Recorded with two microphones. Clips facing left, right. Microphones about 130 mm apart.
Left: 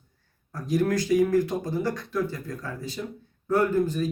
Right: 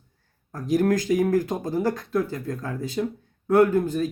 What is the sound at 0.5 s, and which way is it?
A man's voice, 45° right (ahead or behind).